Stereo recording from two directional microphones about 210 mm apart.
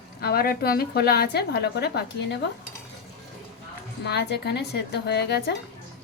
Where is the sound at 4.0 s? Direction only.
50° left (ahead or behind).